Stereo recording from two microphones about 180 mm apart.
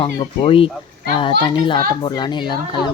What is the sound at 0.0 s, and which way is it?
A child's voice, 30° left (ahead or behind).